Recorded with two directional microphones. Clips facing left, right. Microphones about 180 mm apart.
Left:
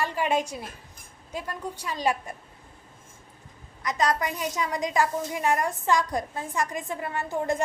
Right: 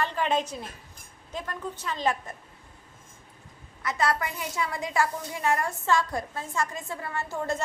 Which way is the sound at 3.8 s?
20° left (ahead or behind).